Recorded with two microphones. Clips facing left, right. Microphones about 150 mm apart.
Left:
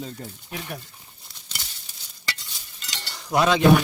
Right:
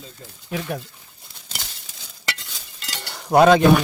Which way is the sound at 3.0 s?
55° right (ahead or behind).